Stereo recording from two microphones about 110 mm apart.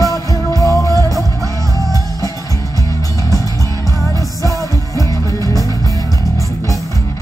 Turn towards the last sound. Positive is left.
turn(degrees=30)  # may be behind; listen again after turning